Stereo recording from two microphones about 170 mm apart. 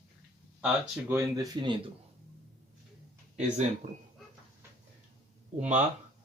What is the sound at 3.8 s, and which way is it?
Speech, 45° right (ahead or behind).